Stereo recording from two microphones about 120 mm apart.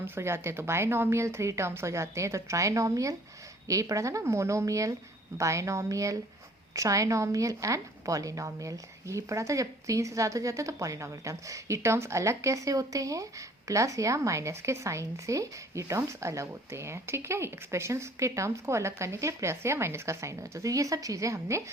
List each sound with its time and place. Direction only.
0.0 s a woman's voice: 20° right (ahead or behind)